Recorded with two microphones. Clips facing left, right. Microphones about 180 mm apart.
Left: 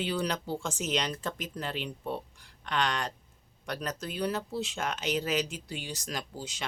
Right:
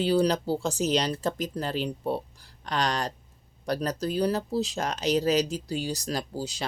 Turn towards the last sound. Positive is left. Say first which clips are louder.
# right 7 dB
turn(degrees=-35)  # may be behind; listen again after turning